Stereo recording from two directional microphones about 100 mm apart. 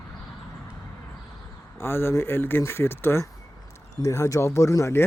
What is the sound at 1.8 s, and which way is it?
Speech, 25° left (ahead or behind).